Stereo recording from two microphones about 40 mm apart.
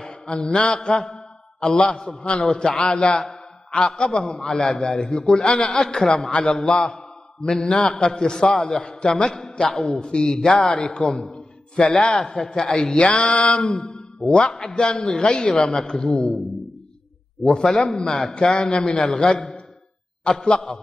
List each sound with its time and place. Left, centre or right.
0.4 s a man's voice: centre
7.4 s a man's voice: centre
9.4 s a man's voice: centre
10.7 s a man's voice: left
11.1 s a man's voice: centre
11.3 s a sound: left
12.3 s a man's voice: centre
12.8 s speech: left
17.4 s a man's voice: left
17.6 s a man's voice: centre
18.6 s speech: left